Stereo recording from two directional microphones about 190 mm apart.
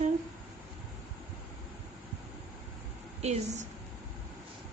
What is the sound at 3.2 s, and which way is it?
Speech, 35° right (ahead or behind).